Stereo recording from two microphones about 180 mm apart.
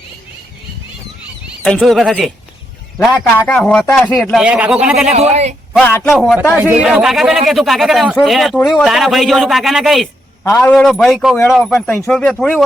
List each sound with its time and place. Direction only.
1.6 s a man's voice: 5° left (ahead or behind)
5.1 s speech: 35° right (ahead or behind)
6.1 s a man's voice: centre (ahead or behind)